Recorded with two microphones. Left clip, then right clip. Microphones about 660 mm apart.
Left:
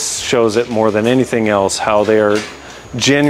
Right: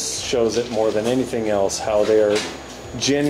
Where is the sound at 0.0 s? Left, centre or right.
Left.